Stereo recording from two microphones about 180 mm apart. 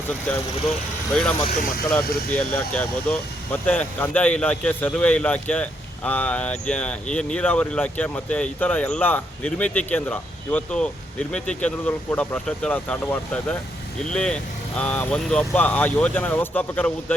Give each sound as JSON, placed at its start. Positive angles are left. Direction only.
{"t": 0.3, "sound": "speech", "side_deg": 5}
{"t": 1.5, "sound": "speech", "side_deg": 50}
{"t": 2.3, "sound": "speech", "side_deg": 10}